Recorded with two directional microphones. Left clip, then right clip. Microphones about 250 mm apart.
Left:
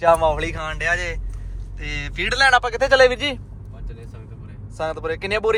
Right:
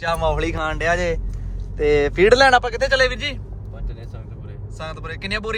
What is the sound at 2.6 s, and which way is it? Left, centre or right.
Speech, centre.